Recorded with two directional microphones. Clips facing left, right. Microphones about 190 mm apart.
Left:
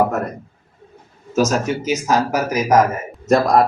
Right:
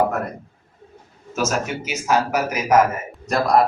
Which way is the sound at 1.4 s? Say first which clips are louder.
Left 5 dB; 40° left (ahead or behind).